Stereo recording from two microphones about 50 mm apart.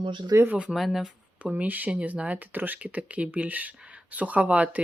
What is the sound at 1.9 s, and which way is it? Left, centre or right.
Speech, right.